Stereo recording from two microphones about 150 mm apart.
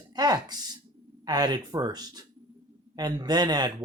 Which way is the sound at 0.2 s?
25° right (ahead or behind).